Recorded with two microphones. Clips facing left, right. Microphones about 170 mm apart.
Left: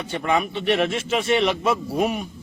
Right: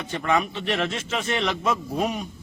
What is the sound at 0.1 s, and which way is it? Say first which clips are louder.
Speech: left 1 dB; 10° left (ahead or behind).